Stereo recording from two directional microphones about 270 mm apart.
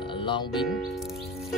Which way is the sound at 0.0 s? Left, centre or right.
Centre.